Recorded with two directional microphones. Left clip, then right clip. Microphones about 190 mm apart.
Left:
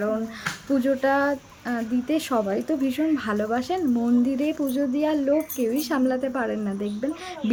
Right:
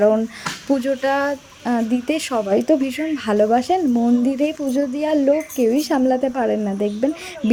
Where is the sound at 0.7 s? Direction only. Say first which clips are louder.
Right 3 dB; 30° right (ahead or behind).